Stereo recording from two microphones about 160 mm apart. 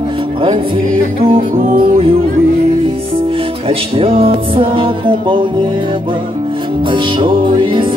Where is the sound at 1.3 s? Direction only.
55° right (ahead or behind).